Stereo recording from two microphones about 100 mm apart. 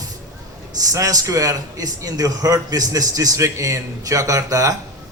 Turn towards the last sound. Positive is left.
turn(degrees=-35)  # may be behind; listen again after turning